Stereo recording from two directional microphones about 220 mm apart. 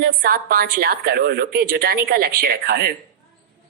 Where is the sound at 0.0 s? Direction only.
45° right (ahead or behind).